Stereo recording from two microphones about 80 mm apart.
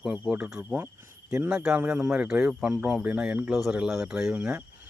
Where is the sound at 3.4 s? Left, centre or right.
Centre.